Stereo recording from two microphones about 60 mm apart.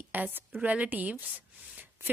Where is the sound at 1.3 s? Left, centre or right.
Right.